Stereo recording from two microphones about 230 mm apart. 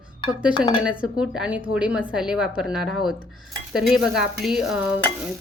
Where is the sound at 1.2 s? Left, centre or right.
Centre.